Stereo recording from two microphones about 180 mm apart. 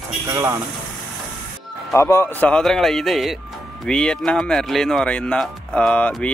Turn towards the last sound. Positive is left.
turn(degrees=5)  # may be behind; listen again after turning